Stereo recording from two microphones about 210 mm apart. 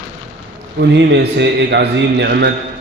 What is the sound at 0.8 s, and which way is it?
A man's voice, 55° right (ahead or behind).